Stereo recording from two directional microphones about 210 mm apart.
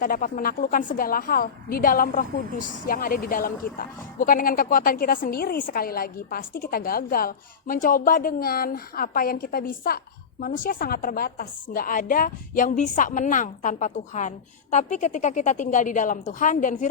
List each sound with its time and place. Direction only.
0.0 s a woman's voice: 40° left (ahead or behind)